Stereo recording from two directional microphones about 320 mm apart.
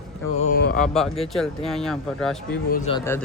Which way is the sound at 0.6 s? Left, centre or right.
Left.